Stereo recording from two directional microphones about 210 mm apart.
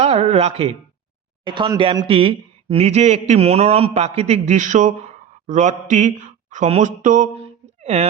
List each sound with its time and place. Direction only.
0.0 s speech: 30° right (ahead or behind)